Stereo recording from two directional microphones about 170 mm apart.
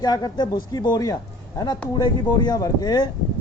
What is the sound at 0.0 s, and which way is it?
Speech, 25° left (ahead or behind).